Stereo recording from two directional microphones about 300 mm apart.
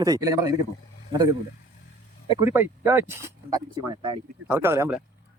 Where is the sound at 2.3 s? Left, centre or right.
Centre.